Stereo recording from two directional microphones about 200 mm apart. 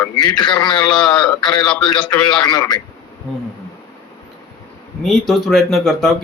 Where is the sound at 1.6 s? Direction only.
5° left (ahead or behind).